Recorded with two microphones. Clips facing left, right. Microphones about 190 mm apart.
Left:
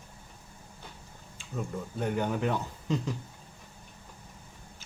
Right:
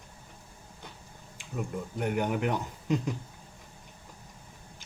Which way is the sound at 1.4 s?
15° right (ahead or behind).